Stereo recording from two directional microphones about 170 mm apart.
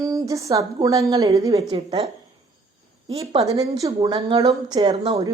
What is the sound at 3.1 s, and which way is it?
Speech, 35° right (ahead or behind).